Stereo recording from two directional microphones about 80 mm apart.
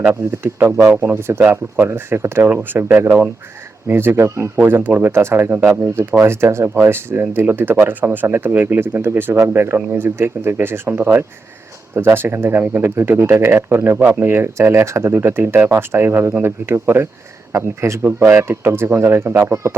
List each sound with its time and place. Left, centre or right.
0.1 s speech: right